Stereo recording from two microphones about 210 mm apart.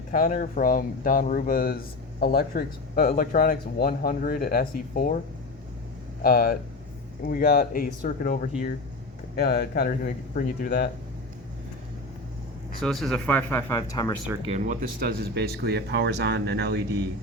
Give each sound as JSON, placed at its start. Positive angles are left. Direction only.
{"t": 0.1, "sound": "speech", "side_deg": 40}
{"t": 6.2, "sound": "speech", "side_deg": 45}
{"t": 9.3, "sound": "speech", "side_deg": 50}
{"t": 12.8, "sound": "speech", "side_deg": 0}
{"t": 14.4, "sound": "speech", "side_deg": -35}